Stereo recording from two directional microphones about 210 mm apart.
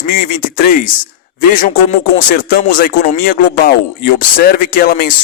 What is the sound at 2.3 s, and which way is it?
Speech, 45° left (ahead or behind).